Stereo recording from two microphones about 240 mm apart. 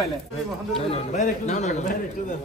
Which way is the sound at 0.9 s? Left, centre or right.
Left.